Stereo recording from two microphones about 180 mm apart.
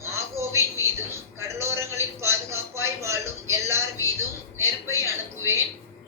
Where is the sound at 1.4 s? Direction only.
15° right (ahead or behind).